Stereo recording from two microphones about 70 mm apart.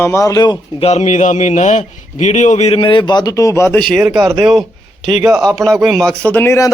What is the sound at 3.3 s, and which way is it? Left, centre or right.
Speech, left.